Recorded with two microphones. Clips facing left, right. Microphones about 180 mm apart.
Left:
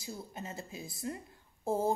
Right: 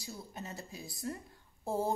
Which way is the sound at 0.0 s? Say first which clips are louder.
Left 2 dB; 25° left (ahead or behind).